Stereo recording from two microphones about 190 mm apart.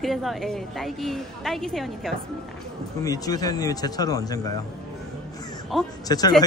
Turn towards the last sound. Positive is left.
turn(degrees=20)  # may be behind; listen again after turning